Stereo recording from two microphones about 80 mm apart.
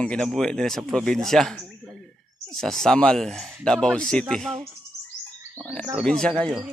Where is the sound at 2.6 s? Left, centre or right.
Centre.